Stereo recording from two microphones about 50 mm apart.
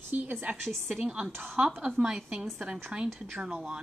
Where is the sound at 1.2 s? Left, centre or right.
Right.